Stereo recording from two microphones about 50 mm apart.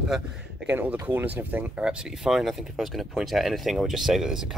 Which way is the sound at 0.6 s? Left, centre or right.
Right.